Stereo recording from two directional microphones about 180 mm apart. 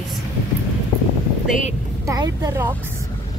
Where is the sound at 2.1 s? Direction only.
20° right (ahead or behind).